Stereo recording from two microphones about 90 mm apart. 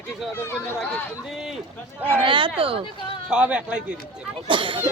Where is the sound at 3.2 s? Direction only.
10° right (ahead or behind).